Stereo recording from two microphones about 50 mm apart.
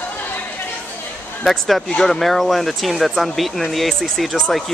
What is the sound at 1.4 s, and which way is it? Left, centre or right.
Speech, centre.